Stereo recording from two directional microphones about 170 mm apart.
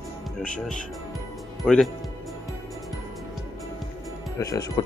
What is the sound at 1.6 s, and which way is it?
Speech, centre (ahead or behind).